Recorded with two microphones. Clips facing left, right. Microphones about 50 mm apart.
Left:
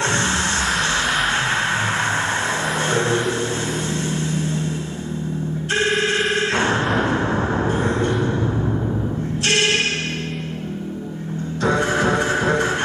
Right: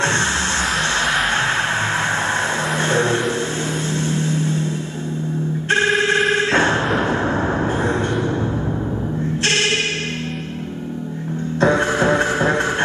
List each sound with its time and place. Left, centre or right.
6.9 s vehicle: centre
11.6 s music: right